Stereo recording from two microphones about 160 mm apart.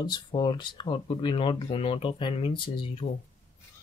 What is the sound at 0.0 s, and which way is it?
Speech, 30° left (ahead or behind).